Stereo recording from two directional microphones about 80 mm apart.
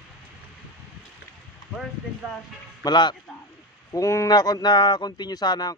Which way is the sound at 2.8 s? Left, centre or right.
Left.